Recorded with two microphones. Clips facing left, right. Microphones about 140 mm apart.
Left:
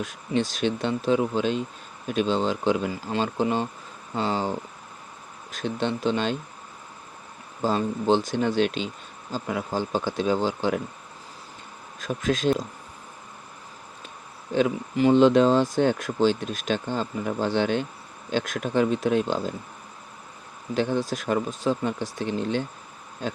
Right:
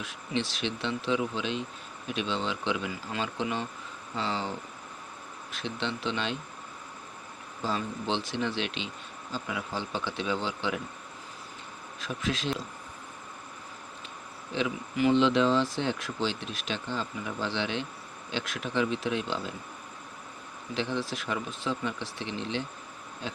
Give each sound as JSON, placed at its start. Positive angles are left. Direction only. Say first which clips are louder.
{"t": 0.0, "sound": "speech", "louder": "left 6 dB", "side_deg": 45}
{"t": 7.6, "sound": "speech", "louder": "left 8 dB", "side_deg": 40}
{"t": 11.9, "sound": "speech", "louder": "left 7 dB", "side_deg": 45}
{"t": 14.5, "sound": "speech", "louder": "left 8 dB", "side_deg": 40}
{"t": 20.7, "sound": "speech", "louder": "left 7 dB", "side_deg": 45}